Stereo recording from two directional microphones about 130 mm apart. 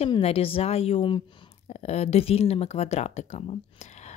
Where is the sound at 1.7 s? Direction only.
55° left (ahead or behind).